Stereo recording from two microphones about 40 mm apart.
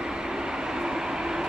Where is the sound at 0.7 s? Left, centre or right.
Centre.